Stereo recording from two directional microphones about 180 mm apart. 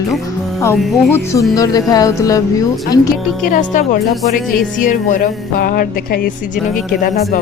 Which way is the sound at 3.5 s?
50° left (ahead or behind).